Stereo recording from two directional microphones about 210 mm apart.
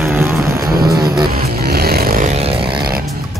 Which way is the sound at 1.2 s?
45° right (ahead or behind).